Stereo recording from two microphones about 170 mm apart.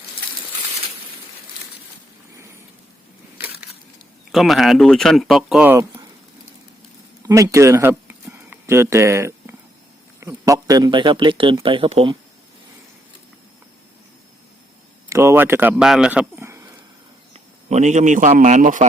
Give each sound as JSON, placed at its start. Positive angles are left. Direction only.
{"t": 3.3, "sound": "crushing", "side_deg": -10}
{"t": 4.3, "sound": "speech", "side_deg": 0}
{"t": 7.2, "sound": "a sound", "side_deg": -20}
{"t": 10.2, "sound": "speech", "side_deg": -20}
{"t": 15.1, "sound": "speech", "side_deg": -15}
{"t": 17.7, "sound": "speech", "side_deg": -45}